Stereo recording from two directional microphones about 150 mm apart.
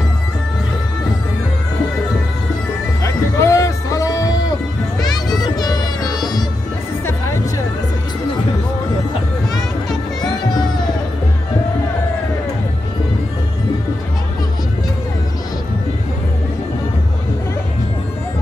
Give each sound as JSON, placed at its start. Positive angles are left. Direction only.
{"t": 3.0, "sound": "music", "side_deg": 20}
{"t": 10.2, "sound": "music", "side_deg": 30}